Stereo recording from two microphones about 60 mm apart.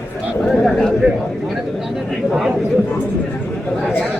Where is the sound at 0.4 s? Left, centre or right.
Centre.